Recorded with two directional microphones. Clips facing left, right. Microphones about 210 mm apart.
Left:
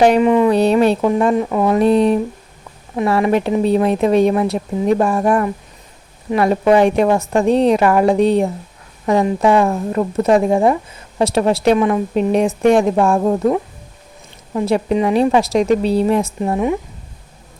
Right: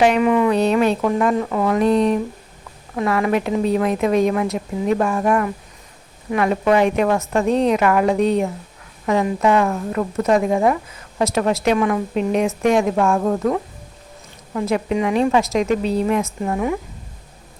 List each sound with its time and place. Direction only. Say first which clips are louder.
0.2 s a woman's voice: left 3 dB; 25° left (ahead or behind)
1.0 s a woman's voice: left 3 dB; 20° left (ahead or behind)